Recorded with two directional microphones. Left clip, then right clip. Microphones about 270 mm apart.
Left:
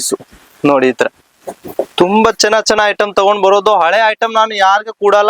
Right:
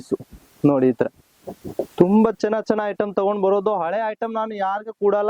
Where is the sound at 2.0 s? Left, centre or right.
Centre.